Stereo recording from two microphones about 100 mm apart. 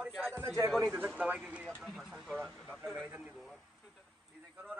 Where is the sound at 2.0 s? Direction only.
5° left (ahead or behind).